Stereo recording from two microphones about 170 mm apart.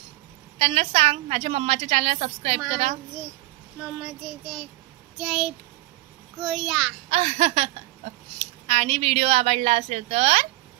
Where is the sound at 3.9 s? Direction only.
Centre (ahead or behind).